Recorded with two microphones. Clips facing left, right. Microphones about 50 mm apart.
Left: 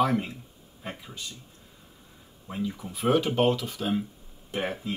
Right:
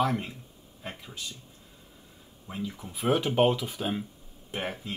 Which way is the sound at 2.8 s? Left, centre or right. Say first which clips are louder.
Left 2 dB; centre.